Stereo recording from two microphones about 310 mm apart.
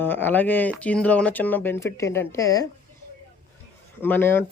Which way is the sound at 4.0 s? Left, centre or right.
Centre.